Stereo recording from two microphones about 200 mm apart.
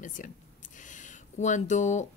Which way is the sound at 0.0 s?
40° left (ahead or behind).